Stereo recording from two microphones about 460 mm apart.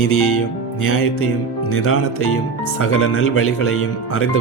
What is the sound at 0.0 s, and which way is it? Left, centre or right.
Speech, left.